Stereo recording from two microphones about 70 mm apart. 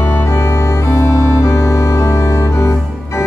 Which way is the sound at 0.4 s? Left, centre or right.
Left.